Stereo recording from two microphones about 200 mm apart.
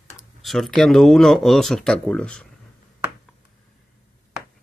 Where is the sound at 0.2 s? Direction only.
Centre (ahead or behind).